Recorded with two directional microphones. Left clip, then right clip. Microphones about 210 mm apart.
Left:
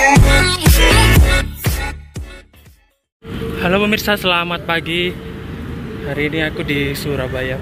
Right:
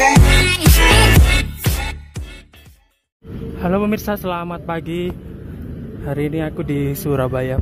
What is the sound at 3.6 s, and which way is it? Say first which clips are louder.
Speech: left 4 dB; 5° right (ahead or behind).